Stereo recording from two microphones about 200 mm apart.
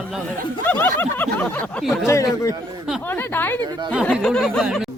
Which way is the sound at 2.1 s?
15° left (ahead or behind).